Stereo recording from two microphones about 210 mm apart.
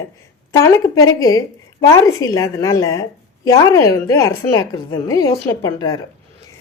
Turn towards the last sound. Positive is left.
turn(degrees=20)  # may be behind; listen again after turning